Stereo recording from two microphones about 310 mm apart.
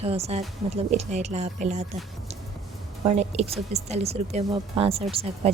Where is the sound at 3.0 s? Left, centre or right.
Right.